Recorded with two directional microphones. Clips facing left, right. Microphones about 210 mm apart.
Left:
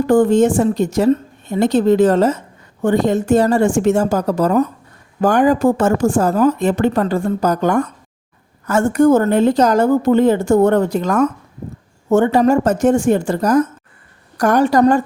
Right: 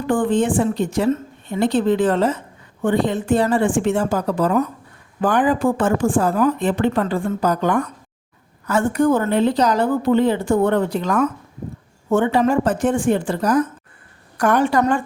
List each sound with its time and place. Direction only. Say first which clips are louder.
0.1 s a woman's voice: left 5 dB; 40° left (ahead or behind)